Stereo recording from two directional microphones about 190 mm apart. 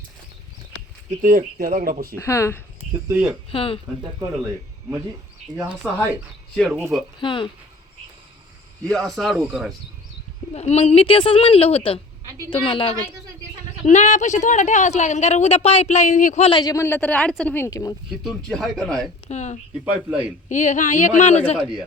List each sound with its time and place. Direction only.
1.2 s speech: 45° right (ahead or behind)
2.1 s speech: 15° left (ahead or behind)
3.1 s a man's voice: 10° right (ahead or behind)
3.5 s a woman's voice: 30° left (ahead or behind)
5.5 s speech: centre (ahead or behind)
6.7 s a man's voice: 15° right (ahead or behind)
7.2 s a woman's voice: 25° left (ahead or behind)
8.9 s speech: 5° left (ahead or behind)
10.5 s a woman's voice: 35° left (ahead or behind)
16.5 s speech: 20° left (ahead or behind)
18.1 s speech: centre (ahead or behind)
19.3 s speech: 40° left (ahead or behind)
19.8 s a man's voice: 10° right (ahead or behind)
20.5 s speech: 40° left (ahead or behind)